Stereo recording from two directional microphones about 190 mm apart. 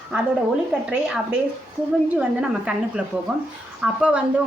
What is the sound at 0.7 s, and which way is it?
A woman's voice, 5° right (ahead or behind).